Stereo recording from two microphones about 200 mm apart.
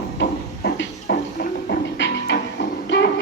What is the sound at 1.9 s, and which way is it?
Music, 65° left (ahead or behind).